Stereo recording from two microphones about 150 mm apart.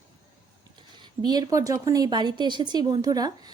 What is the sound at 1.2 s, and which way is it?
A woman's voice, 25° right (ahead or behind).